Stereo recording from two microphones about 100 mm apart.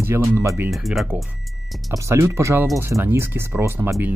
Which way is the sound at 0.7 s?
Centre (ahead or behind).